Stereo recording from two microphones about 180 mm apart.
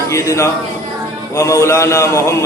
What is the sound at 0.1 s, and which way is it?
Mantra, 15° left (ahead or behind).